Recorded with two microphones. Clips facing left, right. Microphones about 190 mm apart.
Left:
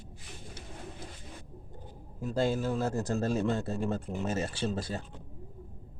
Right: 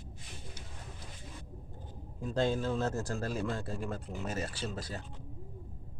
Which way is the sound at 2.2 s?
5° left (ahead or behind).